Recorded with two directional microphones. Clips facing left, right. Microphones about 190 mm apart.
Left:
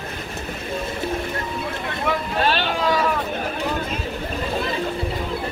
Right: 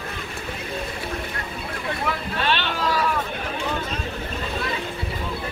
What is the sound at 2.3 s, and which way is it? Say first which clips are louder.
Vehicle: left 3 dB; 40° left (ahead or behind).